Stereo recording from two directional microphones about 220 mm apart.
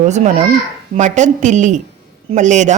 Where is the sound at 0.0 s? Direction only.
30° right (ahead or behind).